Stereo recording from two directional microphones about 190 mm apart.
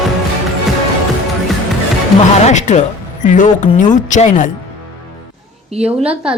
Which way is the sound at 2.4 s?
40° left (ahead or behind).